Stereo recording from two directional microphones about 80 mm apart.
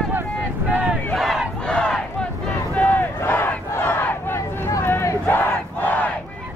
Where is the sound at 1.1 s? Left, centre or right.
Centre.